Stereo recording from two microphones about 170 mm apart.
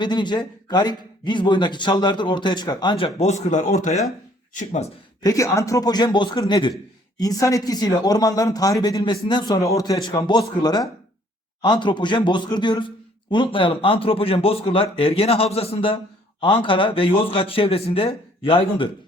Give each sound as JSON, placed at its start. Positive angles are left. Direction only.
{"t": 0.0, "sound": "a man's voice", "side_deg": 25}
{"t": 5.2, "sound": "a man's voice", "side_deg": 20}